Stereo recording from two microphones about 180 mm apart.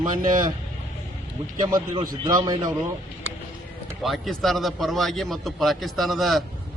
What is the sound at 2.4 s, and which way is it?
Speech, 20° right (ahead or behind).